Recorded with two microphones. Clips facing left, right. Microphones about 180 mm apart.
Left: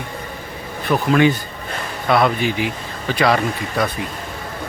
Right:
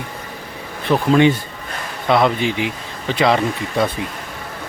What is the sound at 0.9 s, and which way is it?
Speech, 25° right (ahead or behind).